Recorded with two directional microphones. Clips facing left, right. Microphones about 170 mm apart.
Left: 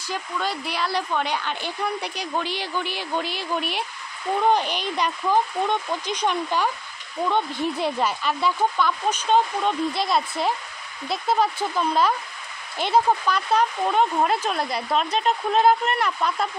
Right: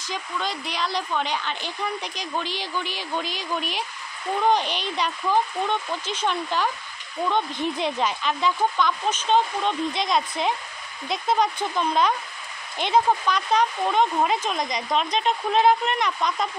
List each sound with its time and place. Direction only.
0.1 s speech: 10° left (ahead or behind)